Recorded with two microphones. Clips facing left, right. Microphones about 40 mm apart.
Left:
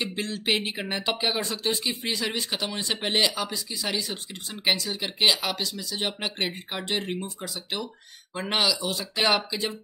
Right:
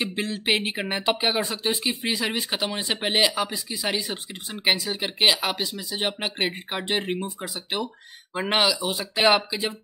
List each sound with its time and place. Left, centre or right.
0.0 s speech: centre